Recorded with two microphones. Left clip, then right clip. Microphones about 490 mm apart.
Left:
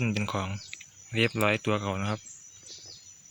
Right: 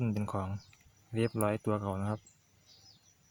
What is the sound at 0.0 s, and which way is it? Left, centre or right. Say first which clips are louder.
Speech: left 6 dB; right.